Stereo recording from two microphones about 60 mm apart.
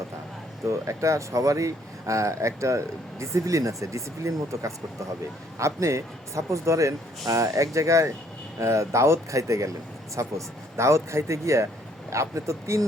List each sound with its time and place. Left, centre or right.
0.7 s speech: right